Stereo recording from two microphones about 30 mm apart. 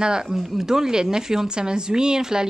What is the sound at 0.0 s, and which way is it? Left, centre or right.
Speech, right.